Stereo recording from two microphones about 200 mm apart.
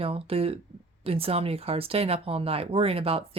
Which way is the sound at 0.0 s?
30° right (ahead or behind).